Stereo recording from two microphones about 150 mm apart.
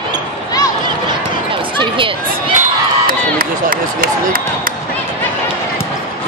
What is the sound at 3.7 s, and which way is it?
Speech, 70° right (ahead or behind).